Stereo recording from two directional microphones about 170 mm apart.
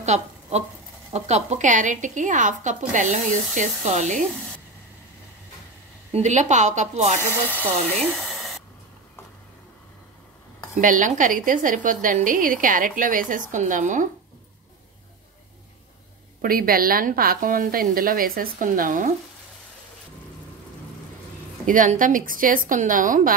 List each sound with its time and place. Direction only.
0.0 s a sound: 40° right (ahead or behind)
1.1 s a woman's voice: 40° right (ahead or behind)
6.1 s a woman's voice: 45° right (ahead or behind)
7.4 s speech: 10° right (ahead or behind)
8.0 s hair dryer: centre (ahead or behind)
10.8 s a woman's voice: 50° right (ahead or behind)
16.3 s a woman's voice: 60° right (ahead or behind)
21.6 s a woman's voice: 50° right (ahead or behind)